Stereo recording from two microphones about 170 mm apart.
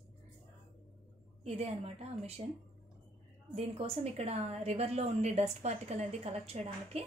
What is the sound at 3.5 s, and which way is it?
A woman's voice, 35° right (ahead or behind).